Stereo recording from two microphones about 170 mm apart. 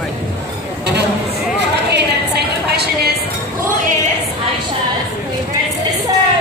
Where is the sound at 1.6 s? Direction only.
75° right (ahead or behind).